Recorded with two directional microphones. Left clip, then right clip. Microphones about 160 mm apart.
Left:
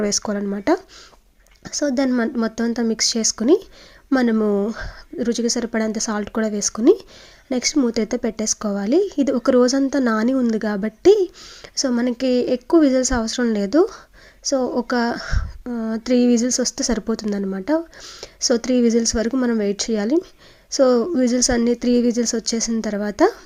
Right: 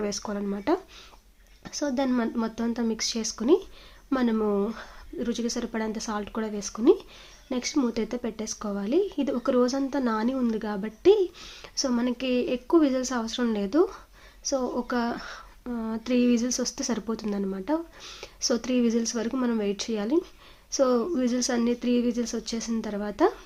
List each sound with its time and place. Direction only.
0.0 s a woman's voice: 40° left (ahead or behind)
11.3 s a woman's voice: 30° left (ahead or behind)